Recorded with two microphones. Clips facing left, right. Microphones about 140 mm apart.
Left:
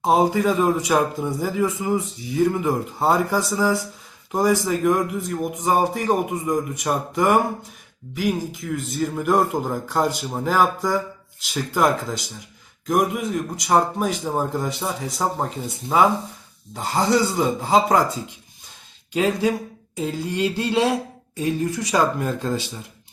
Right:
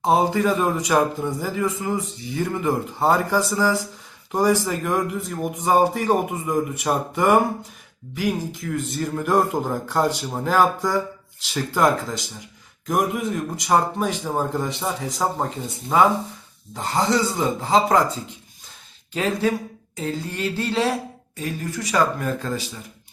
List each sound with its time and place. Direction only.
0.0 s speech: 5° left (ahead or behind)
19.1 s speech: 15° left (ahead or behind)
21.9 s speech: 25° left (ahead or behind)